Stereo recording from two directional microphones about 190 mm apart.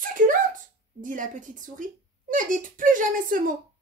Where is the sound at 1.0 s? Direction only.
45° right (ahead or behind).